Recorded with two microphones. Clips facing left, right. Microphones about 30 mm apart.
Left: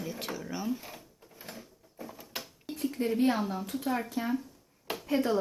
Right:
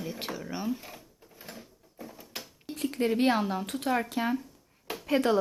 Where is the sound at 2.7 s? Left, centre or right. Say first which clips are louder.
Right 2 dB; right.